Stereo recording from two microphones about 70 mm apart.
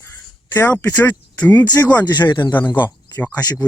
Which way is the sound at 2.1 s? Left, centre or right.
Left.